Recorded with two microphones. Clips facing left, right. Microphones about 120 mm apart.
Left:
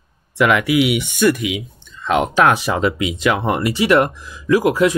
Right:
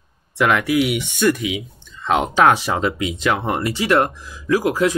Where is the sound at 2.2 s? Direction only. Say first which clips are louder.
Right 1 dB; 60° left (ahead or behind).